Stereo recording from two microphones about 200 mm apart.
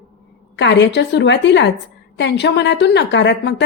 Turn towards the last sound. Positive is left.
turn(degrees=60)  # may be behind; listen again after turning